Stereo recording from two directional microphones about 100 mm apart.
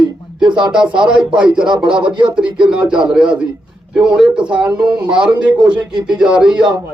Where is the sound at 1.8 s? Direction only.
55° right (ahead or behind).